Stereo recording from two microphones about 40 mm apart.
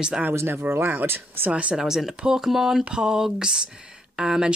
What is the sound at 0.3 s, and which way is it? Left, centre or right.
Speech, right.